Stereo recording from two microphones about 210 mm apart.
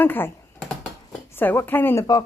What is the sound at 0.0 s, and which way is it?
Speech, 10° left (ahead or behind).